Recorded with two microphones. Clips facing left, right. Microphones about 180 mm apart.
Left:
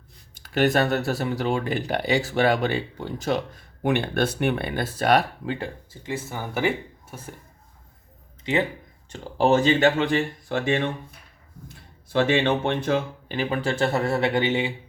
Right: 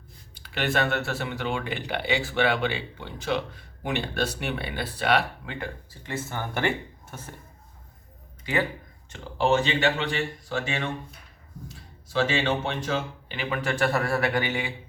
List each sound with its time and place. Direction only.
0.3 s speech: 45° left (ahead or behind)
6.0 s speech: 10° left (ahead or behind)
8.5 s speech: 20° left (ahead or behind)
9.0 s speech: 35° left (ahead or behind)
10.5 s speech: 55° left (ahead or behind)
12.6 s speech: 55° left (ahead or behind)
13.3 s speech: 35° left (ahead or behind)